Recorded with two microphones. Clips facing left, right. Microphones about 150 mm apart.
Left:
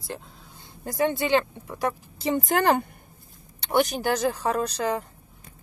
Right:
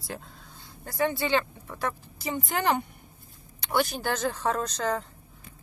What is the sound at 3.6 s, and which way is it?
A woman's voice, 20° left (ahead or behind).